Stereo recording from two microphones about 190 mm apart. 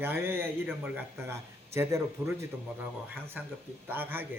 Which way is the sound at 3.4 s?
10° right (ahead or behind).